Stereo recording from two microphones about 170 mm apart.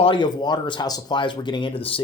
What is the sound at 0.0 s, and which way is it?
Speech, 25° left (ahead or behind).